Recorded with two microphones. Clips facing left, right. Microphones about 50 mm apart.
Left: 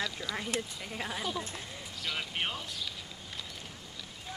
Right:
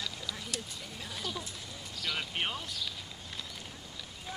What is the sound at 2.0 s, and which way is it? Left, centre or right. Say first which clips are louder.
Speech: even; centre.